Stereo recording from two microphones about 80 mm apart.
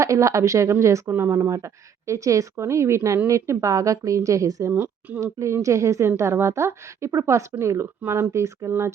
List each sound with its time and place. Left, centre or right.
0.0 s speech: right
4.7 s a woman's voice: right
5.2 s speech: right